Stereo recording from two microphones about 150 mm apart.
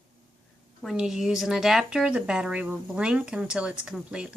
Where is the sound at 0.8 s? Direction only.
5° right (ahead or behind).